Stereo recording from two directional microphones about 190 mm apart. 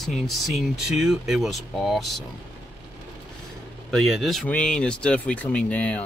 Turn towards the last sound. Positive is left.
turn(degrees=5)  # may be behind; listen again after turning